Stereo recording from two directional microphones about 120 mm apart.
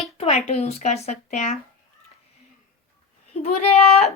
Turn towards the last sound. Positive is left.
turn(degrees=65)  # may be behind; listen again after turning